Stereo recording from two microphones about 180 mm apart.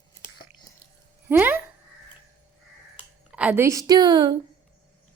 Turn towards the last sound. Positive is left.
turn(degrees=-25)  # may be behind; listen again after turning